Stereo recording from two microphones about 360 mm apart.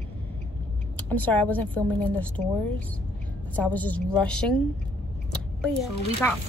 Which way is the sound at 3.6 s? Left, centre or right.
Centre.